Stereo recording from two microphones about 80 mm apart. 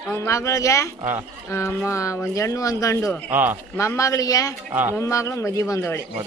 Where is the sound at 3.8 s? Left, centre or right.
Left.